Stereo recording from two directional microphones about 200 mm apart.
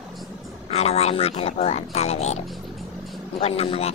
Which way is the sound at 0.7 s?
30° left (ahead or behind).